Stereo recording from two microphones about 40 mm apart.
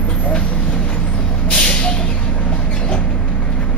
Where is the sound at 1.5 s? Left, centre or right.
Left.